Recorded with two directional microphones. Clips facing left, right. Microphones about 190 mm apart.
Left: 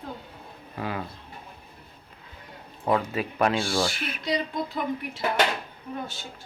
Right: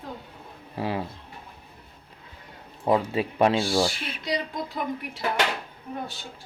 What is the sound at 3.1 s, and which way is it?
Speech, 30° right (ahead or behind).